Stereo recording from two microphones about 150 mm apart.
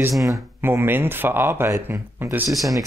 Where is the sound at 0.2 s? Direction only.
20° right (ahead or behind).